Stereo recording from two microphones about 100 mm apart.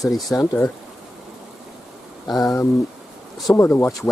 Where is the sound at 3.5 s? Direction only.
25° left (ahead or behind).